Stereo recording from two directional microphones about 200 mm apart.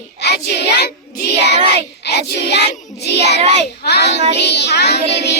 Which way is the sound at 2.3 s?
55° left (ahead or behind).